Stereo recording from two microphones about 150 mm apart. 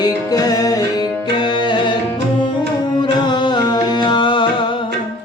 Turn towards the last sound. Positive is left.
turn(degrees=30)  # may be behind; listen again after turning